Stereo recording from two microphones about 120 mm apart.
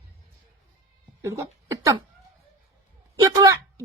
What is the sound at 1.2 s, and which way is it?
Speech, 25° right (ahead or behind).